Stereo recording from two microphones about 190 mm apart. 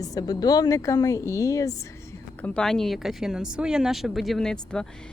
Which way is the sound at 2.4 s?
5° left (ahead or behind).